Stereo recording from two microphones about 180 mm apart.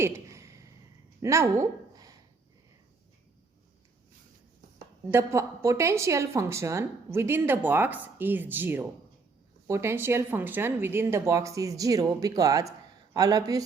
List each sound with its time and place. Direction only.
0.0 s a sound: 15° right (ahead or behind)
1.2 s speech: 15° right (ahead or behind)
5.1 s a woman's voice: 15° right (ahead or behind)